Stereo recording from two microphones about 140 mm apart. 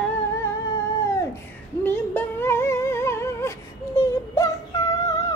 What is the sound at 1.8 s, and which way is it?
Music, 15° left (ahead or behind).